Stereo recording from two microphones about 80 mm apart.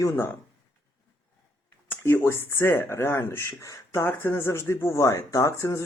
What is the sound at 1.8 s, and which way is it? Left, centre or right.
Speech, left.